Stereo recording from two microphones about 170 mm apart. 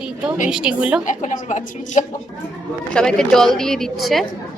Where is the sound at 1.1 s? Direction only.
45° left (ahead or behind).